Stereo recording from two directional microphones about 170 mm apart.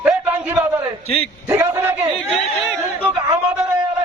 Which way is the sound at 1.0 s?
35° left (ahead or behind).